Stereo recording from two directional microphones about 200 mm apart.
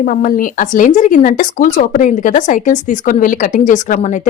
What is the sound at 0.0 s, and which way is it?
A woman's voice, 45° left (ahead or behind).